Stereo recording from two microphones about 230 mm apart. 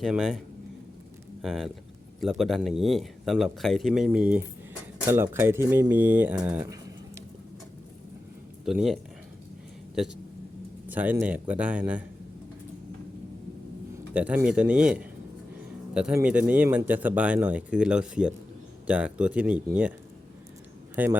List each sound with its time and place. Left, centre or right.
0.0 s speech: centre
8.6 s speech: centre
10.8 s speech: centre
14.1 s speech: centre
20.9 s a man's voice: centre